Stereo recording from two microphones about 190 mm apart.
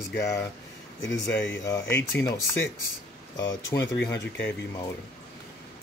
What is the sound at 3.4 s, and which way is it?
Speech, 75° left (ahead or behind).